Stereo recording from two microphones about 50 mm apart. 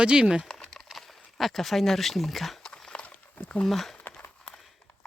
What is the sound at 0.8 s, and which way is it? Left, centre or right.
Speech, centre.